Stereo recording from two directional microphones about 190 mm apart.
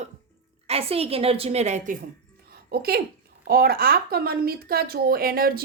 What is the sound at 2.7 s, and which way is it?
Speech, 55° right (ahead or behind).